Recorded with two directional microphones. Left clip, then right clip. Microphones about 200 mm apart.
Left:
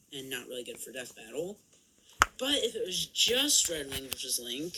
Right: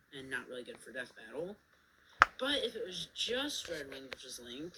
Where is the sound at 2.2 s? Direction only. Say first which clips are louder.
Left 2 dB; 50° left (ahead or behind).